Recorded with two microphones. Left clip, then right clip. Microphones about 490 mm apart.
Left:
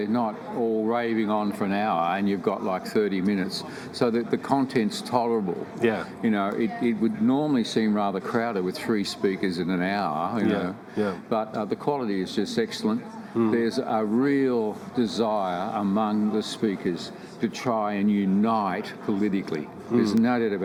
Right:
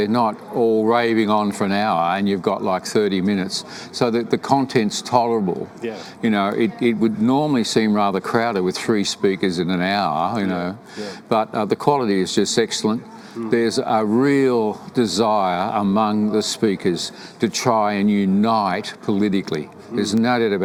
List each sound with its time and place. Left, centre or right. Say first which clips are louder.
0.0 s speech: right 8 dB; right
5.8 s speech: left 7 dB; left
6.2 s speech: right 7 dB; right